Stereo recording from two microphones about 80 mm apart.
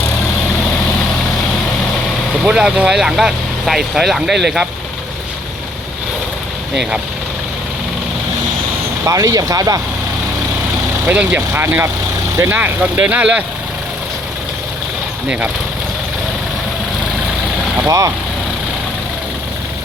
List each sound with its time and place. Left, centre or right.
2.4 s speech: centre
9.0 s speech: right
11.0 s speech: centre
11.5 s speech: right
17.8 s speech: right